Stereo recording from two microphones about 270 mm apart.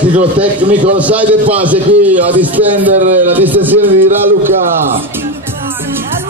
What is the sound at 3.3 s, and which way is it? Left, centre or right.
Speech, centre.